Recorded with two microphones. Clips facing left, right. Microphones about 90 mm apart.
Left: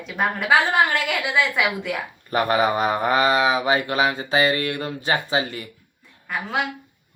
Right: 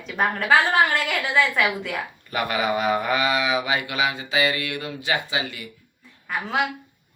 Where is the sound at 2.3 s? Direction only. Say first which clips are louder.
Left 5 dB; 35° left (ahead or behind).